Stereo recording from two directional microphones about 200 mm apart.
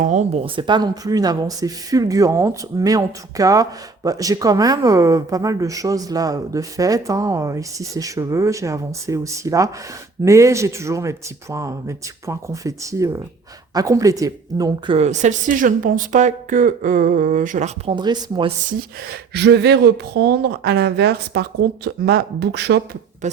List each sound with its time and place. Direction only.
0.0 s speech: 35° right (ahead or behind); by 14.9 s 20° right (ahead or behind)
14.9 s speech: 35° right (ahead or behind)
17.9 s speech: 20° right (ahead or behind)
19.3 s speech: 55° right (ahead or behind)
23.2 s a sound: 35° right (ahead or behind)